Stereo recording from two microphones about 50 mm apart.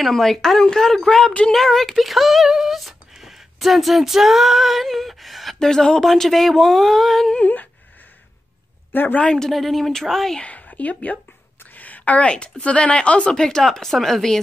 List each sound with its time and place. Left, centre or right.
0.0 s speech: centre
8.9 s speech: left
9.2 s speech: centre
9.5 s speech: centre
10.4 s a woman's voice: left; by 14.4 s centre